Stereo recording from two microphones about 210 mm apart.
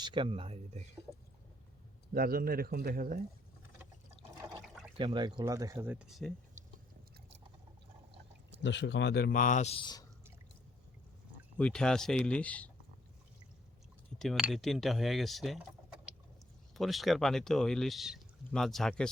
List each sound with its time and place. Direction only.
0.0 s speech: 25° right (ahead or behind)
2.1 s a man's voice: 45° right (ahead or behind)
4.9 s speech: 20° right (ahead or behind); by 6.3 s centre (ahead or behind)
8.6 s a man's voice: 60° left (ahead or behind); by 10.0 s 25° left (ahead or behind)
11.5 s speech: 5° left (ahead or behind)
14.2 s speech: centre (ahead or behind)
16.7 s speech: centre (ahead or behind)